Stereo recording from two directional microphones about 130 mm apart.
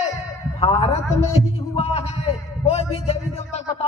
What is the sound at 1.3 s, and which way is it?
Speech, 50° left (ahead or behind).